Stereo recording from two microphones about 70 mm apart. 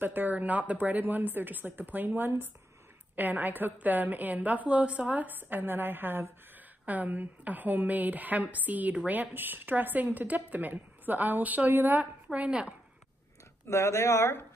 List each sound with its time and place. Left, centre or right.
0.0 s a woman's voice: right
13.7 s speech: left